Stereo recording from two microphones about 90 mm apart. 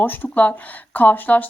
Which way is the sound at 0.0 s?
20° left (ahead or behind).